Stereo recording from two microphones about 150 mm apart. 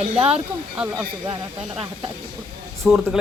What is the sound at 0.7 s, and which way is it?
Speech, 10° right (ahead or behind).